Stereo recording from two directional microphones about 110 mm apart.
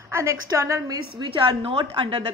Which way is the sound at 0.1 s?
25° right (ahead or behind).